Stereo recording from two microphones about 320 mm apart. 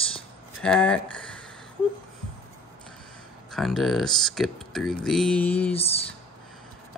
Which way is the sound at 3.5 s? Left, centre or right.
Centre.